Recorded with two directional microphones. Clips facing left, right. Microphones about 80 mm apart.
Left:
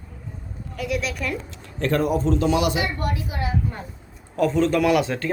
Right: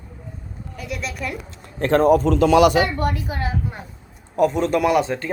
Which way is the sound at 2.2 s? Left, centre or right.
Right.